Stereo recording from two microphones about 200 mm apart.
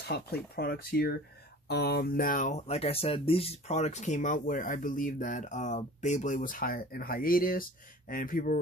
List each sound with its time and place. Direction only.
0.1 s speech: 55° left (ahead or behind)